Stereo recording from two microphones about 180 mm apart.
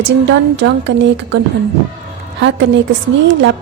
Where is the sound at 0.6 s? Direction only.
90° right.